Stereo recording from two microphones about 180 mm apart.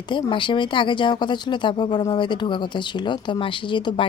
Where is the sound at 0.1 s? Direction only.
25° left (ahead or behind).